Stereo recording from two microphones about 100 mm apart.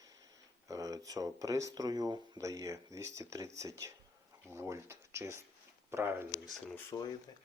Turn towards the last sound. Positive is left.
turn(degrees=45)  # may be behind; listen again after turning